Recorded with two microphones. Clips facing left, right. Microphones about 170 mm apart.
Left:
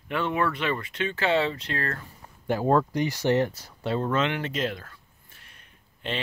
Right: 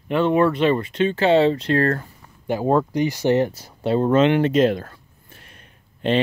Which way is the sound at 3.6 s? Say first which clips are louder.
Right 8 dB; 25° right (ahead or behind).